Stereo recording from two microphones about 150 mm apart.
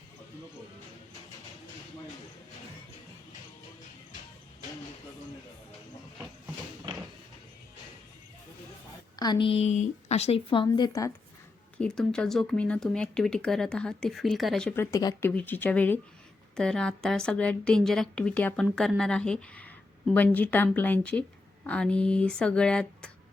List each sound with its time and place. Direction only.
9.1 s a woman's voice: 30° left (ahead or behind)
11.9 s speech: 5° left (ahead or behind)
14.7 s a woman's voice: 20° left (ahead or behind)